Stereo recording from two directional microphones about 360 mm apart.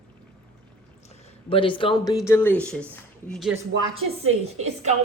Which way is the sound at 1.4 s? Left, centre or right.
Centre.